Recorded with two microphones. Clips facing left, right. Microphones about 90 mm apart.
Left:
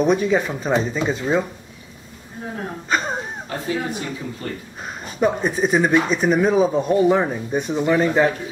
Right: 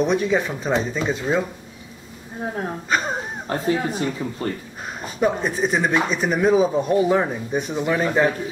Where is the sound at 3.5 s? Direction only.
35° right (ahead or behind).